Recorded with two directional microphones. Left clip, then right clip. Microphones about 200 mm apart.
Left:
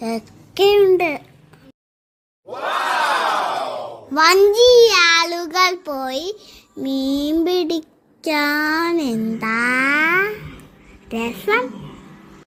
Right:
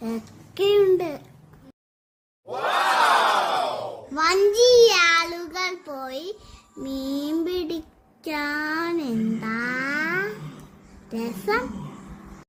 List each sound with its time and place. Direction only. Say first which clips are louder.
0.0 s a child's voice: left 7 dB; 35° left (ahead or behind)
2.5 s crowd: left 1 dB; centre (ahead or behind)
4.1 s a sound: left 8 dB; 40° left (ahead or behind)
4.4 s child singing: left 3 dB; 25° left (ahead or behind)